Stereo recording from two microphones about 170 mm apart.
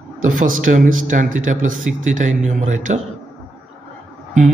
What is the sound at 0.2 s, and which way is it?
Speech, 50° right (ahead or behind).